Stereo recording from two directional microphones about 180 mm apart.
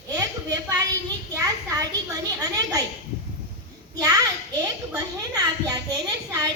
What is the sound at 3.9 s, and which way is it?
A child's voice, 20° right (ahead or behind).